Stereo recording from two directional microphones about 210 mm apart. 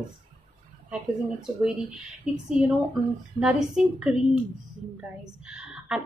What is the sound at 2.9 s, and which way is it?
A woman's voice, 5° right (ahead or behind).